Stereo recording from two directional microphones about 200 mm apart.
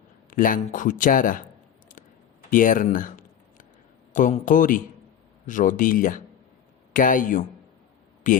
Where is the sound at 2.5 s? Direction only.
40° left (ahead or behind).